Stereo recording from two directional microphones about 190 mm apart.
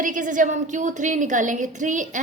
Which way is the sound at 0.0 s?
45° right (ahead or behind).